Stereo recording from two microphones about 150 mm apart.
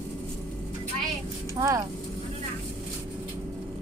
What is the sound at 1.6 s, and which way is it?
Speech, 20° right (ahead or behind).